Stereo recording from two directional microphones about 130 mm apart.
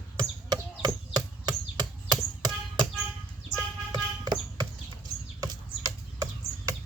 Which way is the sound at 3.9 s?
35° right (ahead or behind).